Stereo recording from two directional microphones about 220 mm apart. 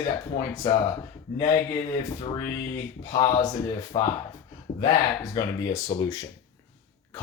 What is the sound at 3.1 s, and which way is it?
Speech, 25° left (ahead or behind).